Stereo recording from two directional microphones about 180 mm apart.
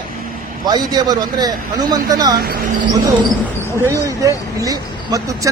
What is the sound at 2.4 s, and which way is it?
Speech, 55° right (ahead or behind).